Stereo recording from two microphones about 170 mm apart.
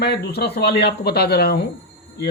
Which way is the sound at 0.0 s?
75° left (ahead or behind).